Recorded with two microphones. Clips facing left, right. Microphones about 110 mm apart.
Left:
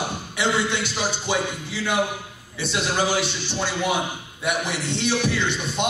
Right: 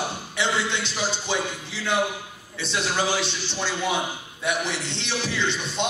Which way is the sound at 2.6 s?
15° left (ahead or behind).